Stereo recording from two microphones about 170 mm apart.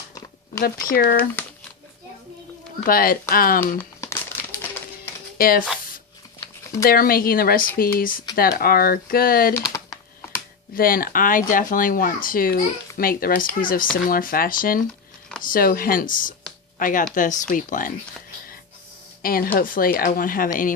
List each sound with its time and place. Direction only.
0.6 s speech: 60° left (ahead or behind)
1.4 s speech: 10° left (ahead or behind)
2.8 s speech: 55° left (ahead or behind)
3.8 s crumpling: 10° left (ahead or behind)
5.4 s speech: 60° left (ahead or behind)
6.8 s speech: 60° left (ahead or behind)
9.6 s typing: 20° left (ahead or behind)
10.8 s speech: 60° left (ahead or behind)
19.2 s speech: 60° left (ahead or behind)